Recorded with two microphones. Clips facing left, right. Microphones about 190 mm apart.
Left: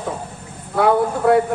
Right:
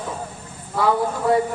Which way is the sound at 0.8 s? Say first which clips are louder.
Left 4 dB; 60° left (ahead or behind).